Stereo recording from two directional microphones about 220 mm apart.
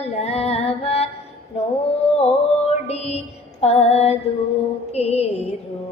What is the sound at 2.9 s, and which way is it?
Music, 30° left (ahead or behind).